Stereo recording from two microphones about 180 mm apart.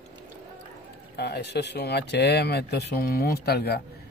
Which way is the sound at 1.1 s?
65° left (ahead or behind).